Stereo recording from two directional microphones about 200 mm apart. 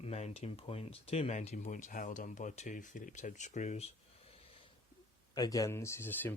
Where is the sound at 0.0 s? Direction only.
30° left (ahead or behind).